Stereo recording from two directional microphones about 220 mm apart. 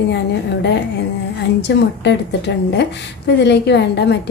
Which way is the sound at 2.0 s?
50° left (ahead or behind).